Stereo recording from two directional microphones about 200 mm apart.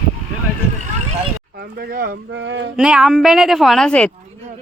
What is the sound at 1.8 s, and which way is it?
Speech, 50° right (ahead or behind).